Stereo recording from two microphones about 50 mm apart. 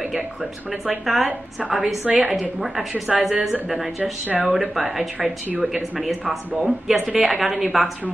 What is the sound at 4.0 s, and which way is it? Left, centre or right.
Speech, right.